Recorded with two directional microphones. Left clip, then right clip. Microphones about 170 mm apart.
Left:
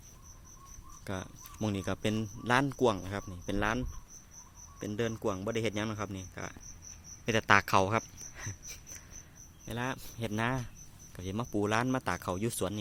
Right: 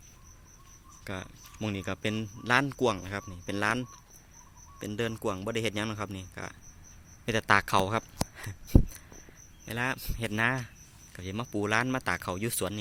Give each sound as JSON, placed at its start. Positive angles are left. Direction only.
{"t": 1.0, "sound": "speech", "side_deg": 10}
{"t": 8.4, "sound": "a sound", "side_deg": 0}
{"t": 9.6, "sound": "speech", "side_deg": -5}
{"t": 11.2, "sound": "speech", "side_deg": 5}